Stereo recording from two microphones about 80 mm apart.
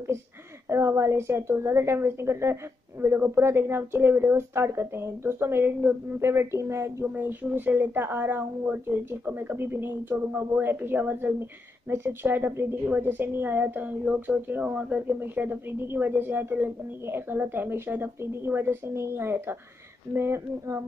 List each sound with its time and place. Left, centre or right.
0.7 s a woman's voice: right
7.2 s a woman's voice: right